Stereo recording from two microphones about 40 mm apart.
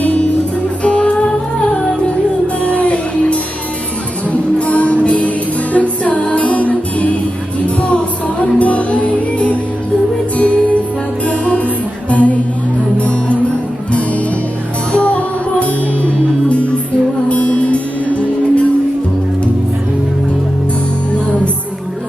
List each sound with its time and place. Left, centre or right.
0.0 s music: left
2.6 s music: left
14.9 s music: left